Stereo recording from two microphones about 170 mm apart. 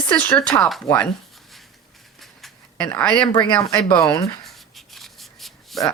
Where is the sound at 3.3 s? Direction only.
25° left (ahead or behind).